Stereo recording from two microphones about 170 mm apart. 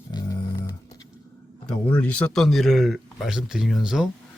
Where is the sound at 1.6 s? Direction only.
5° left (ahead or behind).